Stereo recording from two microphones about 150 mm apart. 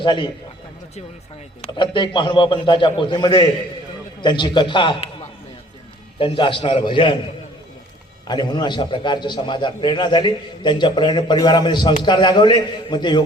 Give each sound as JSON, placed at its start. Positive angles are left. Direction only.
{"t": 0.0, "sound": "a man's voice", "side_deg": 35}
{"t": 1.6, "sound": "a man's voice", "side_deg": 35}
{"t": 6.1, "sound": "a man's voice", "side_deg": 35}
{"t": 8.3, "sound": "a man's voice", "side_deg": 30}